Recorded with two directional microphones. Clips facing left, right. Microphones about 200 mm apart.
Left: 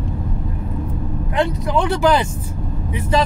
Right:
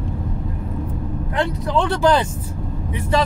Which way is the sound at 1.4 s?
15° left (ahead or behind).